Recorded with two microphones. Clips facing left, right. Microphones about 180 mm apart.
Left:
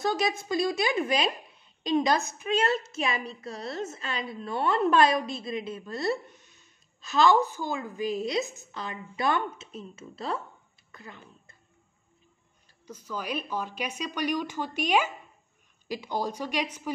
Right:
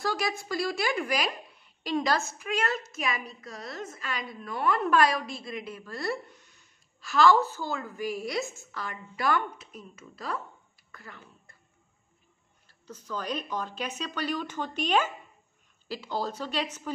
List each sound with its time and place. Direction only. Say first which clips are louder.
0.0 s a woman's voice: left 3 dB; 20° left (ahead or behind)
12.8 s speech: even; 10° left (ahead or behind)